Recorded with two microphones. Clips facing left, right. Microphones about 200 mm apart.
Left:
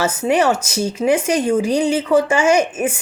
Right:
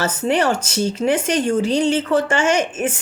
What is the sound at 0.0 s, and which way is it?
Speech, 10° left (ahead or behind).